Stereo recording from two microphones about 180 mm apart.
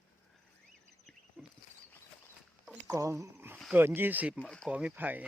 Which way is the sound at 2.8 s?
15° right (ahead or behind).